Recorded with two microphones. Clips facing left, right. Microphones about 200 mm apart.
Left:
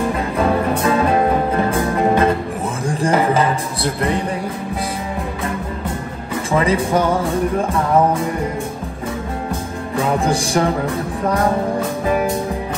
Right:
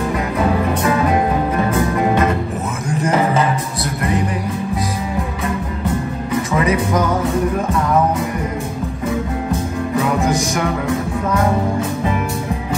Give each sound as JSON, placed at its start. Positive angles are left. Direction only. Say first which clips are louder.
{"t": 0.4, "sound": "music", "louder": "left 1 dB", "side_deg": 30}
{"t": 6.5, "sound": "music", "louder": "left 2 dB", "side_deg": 30}
{"t": 10.2, "sound": "music", "louder": "left 1 dB", "side_deg": 30}